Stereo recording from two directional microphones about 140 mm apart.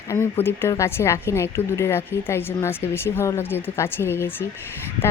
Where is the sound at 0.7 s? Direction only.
20° left (ahead or behind).